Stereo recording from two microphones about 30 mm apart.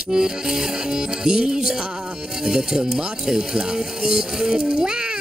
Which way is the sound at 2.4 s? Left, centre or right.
Centre.